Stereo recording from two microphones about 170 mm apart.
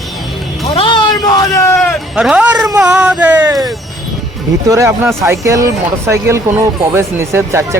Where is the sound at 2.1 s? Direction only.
5° right (ahead or behind).